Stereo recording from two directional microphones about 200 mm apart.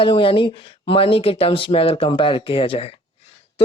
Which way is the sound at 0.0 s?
25° left (ahead or behind).